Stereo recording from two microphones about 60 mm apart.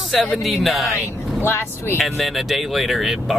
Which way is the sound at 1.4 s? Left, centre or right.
Left.